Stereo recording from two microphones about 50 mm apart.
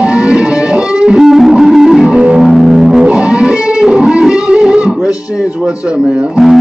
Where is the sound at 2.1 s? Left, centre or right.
Right.